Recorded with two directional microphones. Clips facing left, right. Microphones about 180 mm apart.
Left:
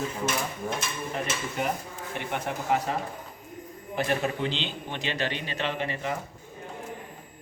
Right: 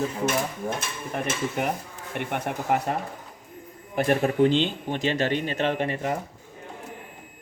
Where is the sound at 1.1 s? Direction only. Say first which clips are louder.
Right 6 dB; 55° right (ahead or behind).